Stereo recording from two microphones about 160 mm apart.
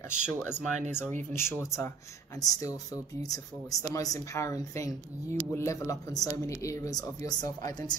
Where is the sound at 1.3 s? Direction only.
15° left (ahead or behind).